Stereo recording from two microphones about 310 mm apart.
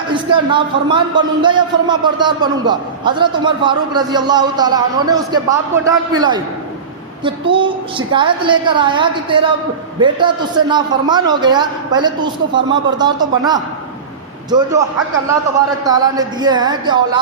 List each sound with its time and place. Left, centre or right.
0.1 s a man's voice: centre
15.9 s a man's voice: centre